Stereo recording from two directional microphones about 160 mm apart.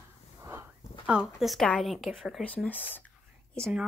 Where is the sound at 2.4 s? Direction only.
10° left (ahead or behind).